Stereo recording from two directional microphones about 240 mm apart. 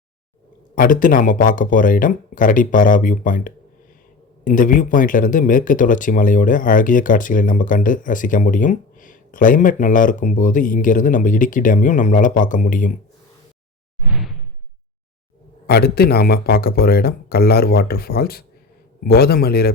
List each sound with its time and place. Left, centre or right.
0.8 s speech: left
14.1 s door: centre
15.6 s speech: left